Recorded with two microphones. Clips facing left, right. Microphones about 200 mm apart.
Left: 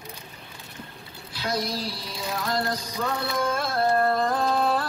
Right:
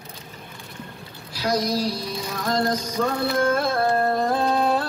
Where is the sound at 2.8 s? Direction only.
45° right (ahead or behind).